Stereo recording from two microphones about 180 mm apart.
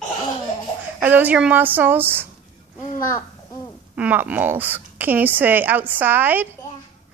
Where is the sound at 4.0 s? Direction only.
10° right (ahead or behind).